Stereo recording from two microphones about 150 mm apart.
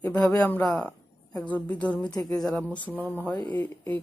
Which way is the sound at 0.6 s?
5° left (ahead or behind).